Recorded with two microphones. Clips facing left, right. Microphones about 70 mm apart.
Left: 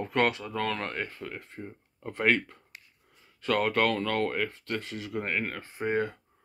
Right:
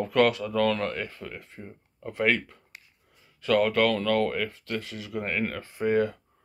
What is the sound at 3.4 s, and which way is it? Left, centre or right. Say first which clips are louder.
Speech: right 3 dB; left.